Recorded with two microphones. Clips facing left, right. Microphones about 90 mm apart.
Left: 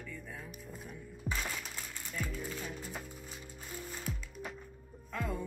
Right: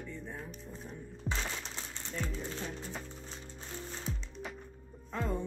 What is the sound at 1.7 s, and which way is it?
Typewriter, 25° right (ahead or behind).